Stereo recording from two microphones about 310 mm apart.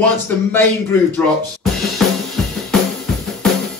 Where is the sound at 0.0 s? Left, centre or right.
Centre.